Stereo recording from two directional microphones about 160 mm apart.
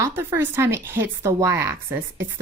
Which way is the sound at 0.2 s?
15° right (ahead or behind).